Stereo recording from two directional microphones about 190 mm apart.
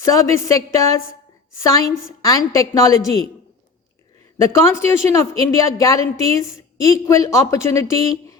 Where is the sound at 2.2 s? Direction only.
15° left (ahead or behind).